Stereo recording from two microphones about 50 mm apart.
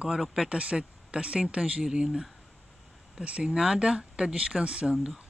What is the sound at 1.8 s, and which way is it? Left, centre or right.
Speech, centre.